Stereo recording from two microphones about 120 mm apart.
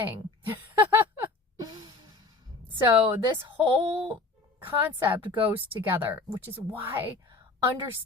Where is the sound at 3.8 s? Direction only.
50° right (ahead or behind).